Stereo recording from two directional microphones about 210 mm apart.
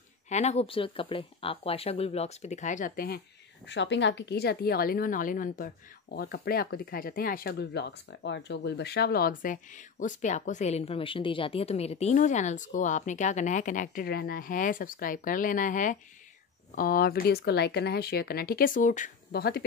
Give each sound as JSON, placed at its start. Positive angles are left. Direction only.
{"t": 0.3, "sound": "speech", "side_deg": 30}
{"t": 3.6, "sound": "a woman's voice", "side_deg": 60}